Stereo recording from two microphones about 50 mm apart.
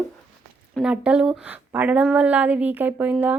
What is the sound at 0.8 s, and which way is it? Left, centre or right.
Speech, centre.